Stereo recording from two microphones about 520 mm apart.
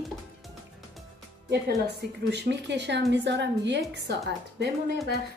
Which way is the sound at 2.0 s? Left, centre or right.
Centre.